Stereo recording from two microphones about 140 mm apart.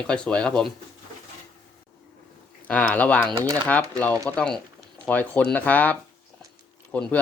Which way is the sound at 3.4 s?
25° right (ahead or behind).